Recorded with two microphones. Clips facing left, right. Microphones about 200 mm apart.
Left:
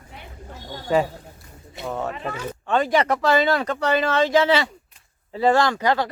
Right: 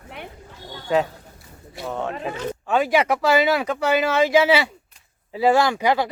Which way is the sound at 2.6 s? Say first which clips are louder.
Even; 5° right (ahead or behind).